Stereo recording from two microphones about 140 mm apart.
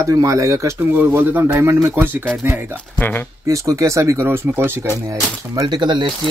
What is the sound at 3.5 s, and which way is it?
Speech, 20° right (ahead or behind).